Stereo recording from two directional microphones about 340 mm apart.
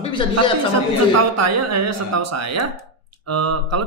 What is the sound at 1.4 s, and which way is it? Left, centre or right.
Speech, right.